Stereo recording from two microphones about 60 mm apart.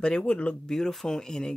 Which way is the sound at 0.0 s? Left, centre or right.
Centre.